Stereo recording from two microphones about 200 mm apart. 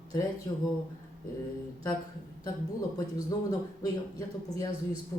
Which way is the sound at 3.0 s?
20° left (ahead or behind).